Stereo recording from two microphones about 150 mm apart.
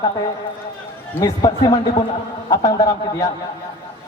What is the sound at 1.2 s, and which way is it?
A man's voice, 25° left (ahead or behind).